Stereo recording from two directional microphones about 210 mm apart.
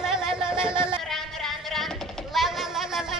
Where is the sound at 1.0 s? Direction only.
Centre (ahead or behind).